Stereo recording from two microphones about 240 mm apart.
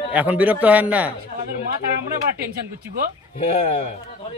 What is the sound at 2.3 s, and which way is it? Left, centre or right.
Speech, right.